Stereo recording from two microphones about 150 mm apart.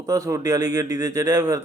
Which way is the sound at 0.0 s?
20° right (ahead or behind).